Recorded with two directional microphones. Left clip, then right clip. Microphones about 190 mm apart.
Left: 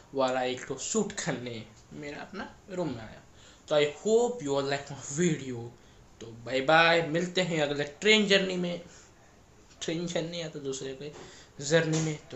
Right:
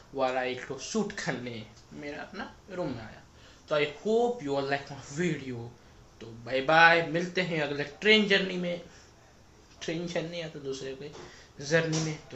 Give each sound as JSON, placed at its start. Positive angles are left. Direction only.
{"t": 0.1, "sound": "speech", "side_deg": 30}
{"t": 9.8, "sound": "speech", "side_deg": 25}